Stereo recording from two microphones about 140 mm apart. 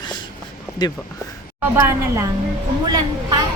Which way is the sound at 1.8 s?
20° right (ahead or behind).